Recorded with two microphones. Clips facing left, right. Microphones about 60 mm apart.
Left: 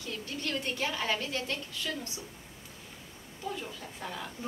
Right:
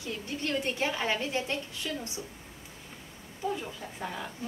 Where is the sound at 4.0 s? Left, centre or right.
Centre.